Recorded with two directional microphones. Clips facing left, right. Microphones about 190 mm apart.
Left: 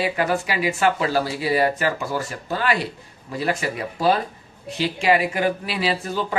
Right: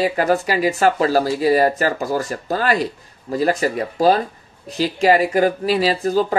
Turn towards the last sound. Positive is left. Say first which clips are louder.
# right 7 dB
turn(degrees=-40)  # may be behind; listen again after turning